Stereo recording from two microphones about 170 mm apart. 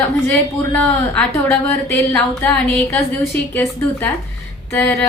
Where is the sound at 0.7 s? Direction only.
5° left (ahead or behind).